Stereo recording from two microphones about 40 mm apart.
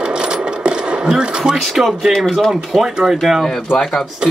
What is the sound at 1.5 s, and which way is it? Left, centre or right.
Speech, centre.